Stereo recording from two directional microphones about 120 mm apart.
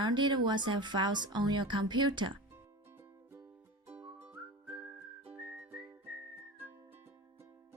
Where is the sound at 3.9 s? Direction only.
15° right (ahead or behind).